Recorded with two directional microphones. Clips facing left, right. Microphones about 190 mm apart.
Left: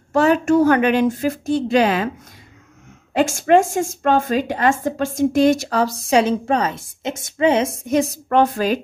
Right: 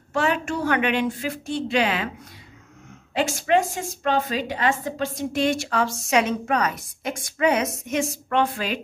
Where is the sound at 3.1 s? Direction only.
45° left (ahead or behind).